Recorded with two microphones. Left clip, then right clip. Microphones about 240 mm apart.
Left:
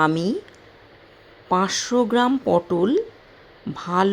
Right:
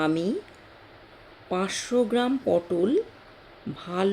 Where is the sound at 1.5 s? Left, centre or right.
Centre.